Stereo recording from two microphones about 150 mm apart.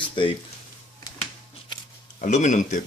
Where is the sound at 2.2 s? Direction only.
55° left (ahead or behind).